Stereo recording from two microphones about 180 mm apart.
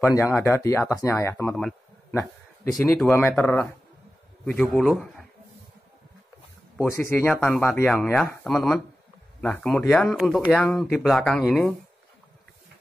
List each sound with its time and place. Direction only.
0.0 s speech: 15° left (ahead or behind)
1.5 s speech: centre (ahead or behind)
2.0 s a sound: 15° left (ahead or behind)
3.0 s speech: 10° left (ahead or behind)
4.5 s speech: 5° left (ahead or behind)
6.8 s speech: 15° left (ahead or behind)
8.5 s speech: centre (ahead or behind)